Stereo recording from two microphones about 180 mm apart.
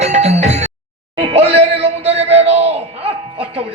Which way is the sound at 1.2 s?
35° right (ahead or behind).